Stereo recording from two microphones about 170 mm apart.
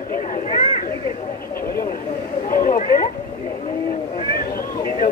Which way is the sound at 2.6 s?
50° left (ahead or behind).